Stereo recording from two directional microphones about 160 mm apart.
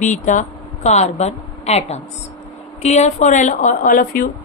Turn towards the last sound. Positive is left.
turn(degrees=60)  # may be behind; listen again after turning